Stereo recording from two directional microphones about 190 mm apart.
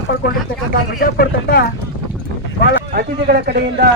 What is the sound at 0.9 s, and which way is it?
Speech, 50° left (ahead or behind).